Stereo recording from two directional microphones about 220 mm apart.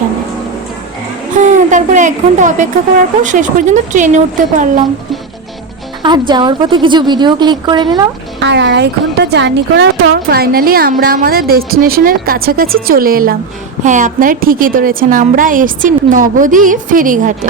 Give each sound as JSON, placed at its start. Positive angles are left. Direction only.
{"t": 1.4, "sound": "a sound", "side_deg": -35}
{"t": 3.2, "sound": "a woman's voice", "side_deg": -35}
{"t": 6.0, "sound": "a woman's voice", "side_deg": -20}
{"t": 8.4, "sound": "a woman's voice", "side_deg": -50}